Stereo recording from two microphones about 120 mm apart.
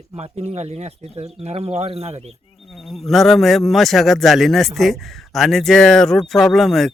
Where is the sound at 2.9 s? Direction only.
Centre (ahead or behind).